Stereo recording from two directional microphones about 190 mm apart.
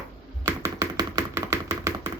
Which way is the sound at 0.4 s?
20° right (ahead or behind).